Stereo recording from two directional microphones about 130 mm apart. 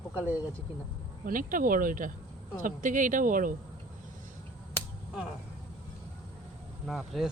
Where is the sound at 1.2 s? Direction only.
90° right.